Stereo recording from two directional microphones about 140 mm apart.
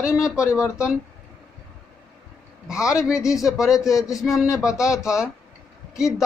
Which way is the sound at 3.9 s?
25° left (ahead or behind).